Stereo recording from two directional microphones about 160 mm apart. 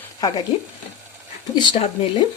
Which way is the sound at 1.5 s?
30° left (ahead or behind).